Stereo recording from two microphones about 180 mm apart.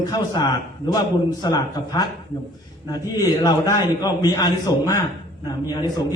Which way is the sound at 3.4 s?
20° left (ahead or behind).